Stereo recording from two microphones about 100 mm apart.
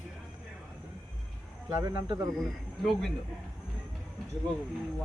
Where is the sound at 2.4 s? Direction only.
Centre (ahead or behind).